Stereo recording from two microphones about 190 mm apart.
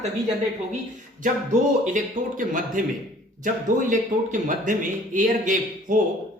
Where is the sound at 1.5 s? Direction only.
45° right (ahead or behind).